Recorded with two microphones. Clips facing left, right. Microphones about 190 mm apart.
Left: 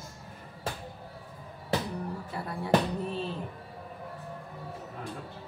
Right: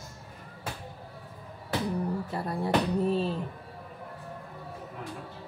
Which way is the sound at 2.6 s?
35° right (ahead or behind).